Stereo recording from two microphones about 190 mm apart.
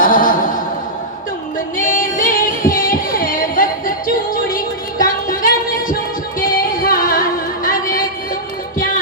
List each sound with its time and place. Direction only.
0.0 s music: 45° left (ahead or behind)
1.8 s singing: 45° left (ahead or behind)
6.4 s music: 45° left (ahead or behind)